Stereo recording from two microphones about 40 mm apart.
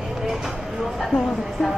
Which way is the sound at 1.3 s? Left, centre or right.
Centre.